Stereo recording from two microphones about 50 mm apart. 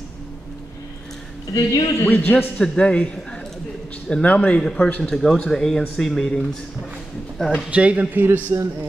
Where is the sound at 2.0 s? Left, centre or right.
Left.